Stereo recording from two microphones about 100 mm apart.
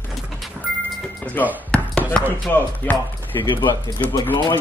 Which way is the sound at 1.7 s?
10° left (ahead or behind).